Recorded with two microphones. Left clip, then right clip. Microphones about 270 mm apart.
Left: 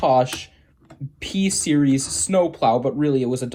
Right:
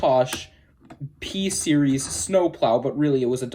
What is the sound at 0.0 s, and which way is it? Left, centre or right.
Speech, left.